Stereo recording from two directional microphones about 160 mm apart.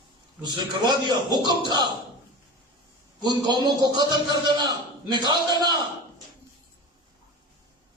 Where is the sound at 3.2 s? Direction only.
25° right (ahead or behind).